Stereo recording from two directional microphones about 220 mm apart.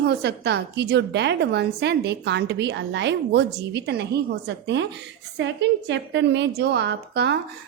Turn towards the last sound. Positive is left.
turn(degrees=-50)  # may be behind; listen again after turning